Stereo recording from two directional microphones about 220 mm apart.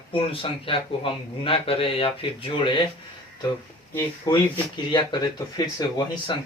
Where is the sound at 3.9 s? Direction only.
10° left (ahead or behind).